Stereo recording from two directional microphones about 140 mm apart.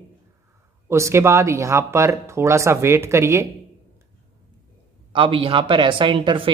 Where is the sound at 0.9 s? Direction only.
20° right (ahead or behind).